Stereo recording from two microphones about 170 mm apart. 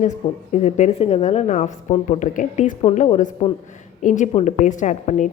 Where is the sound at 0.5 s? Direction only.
45° left (ahead or behind).